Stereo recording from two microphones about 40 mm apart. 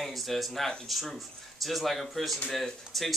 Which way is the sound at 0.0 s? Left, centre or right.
Centre.